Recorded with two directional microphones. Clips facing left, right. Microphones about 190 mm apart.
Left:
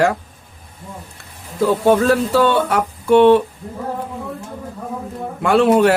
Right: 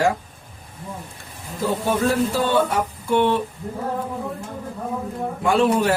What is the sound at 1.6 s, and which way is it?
Speech, 70° left (ahead or behind).